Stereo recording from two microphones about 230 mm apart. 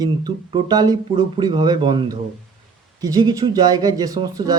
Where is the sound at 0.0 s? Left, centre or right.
Centre.